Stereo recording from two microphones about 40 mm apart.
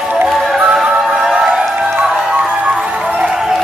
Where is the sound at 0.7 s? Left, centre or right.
Centre.